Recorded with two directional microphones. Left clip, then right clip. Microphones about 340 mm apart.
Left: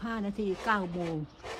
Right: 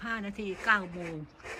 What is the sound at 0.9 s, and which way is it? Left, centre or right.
Speech, left.